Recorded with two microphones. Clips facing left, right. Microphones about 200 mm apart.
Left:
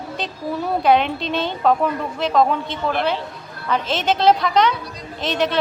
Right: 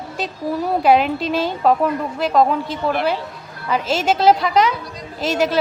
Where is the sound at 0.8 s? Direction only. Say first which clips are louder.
Right 2 dB; 5° right (ahead or behind).